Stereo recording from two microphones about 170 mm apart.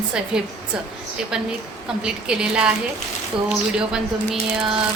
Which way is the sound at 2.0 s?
5° right (ahead or behind).